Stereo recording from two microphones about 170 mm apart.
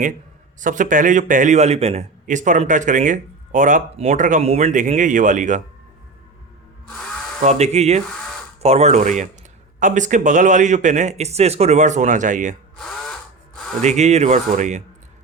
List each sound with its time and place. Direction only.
0.6 s a man's voice: 50° right (ahead or behind)
7.4 s a man's voice: 40° right (ahead or behind)
13.8 s speech: 40° right (ahead or behind)